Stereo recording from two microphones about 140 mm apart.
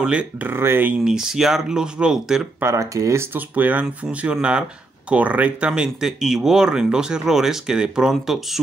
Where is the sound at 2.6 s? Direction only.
20° right (ahead or behind).